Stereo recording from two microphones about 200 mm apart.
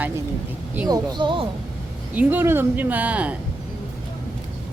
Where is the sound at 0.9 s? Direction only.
25° right (ahead or behind).